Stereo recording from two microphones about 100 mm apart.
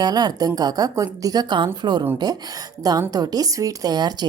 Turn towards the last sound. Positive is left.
turn(degrees=-45)  # may be behind; listen again after turning